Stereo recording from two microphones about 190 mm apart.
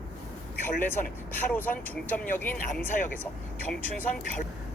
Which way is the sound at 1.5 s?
10° left (ahead or behind).